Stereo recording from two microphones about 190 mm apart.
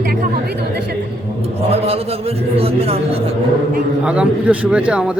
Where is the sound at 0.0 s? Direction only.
55° right (ahead or behind).